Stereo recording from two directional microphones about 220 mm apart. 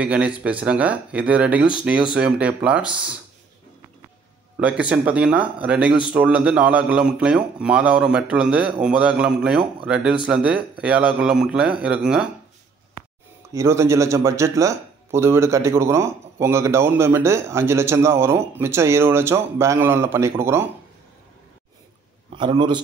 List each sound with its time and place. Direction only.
0.0 s speech: 5° right (ahead or behind)
4.6 s speech: 5° right (ahead or behind)
13.5 s speech: 15° right (ahead or behind)
22.3 s a man's voice: 20° right (ahead or behind)